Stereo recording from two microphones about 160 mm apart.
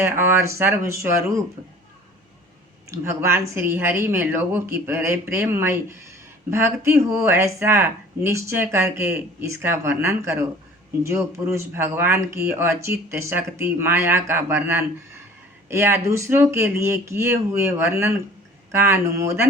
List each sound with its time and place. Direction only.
0.0 s speech: 15° right (ahead or behind)
2.9 s speech: 15° right (ahead or behind)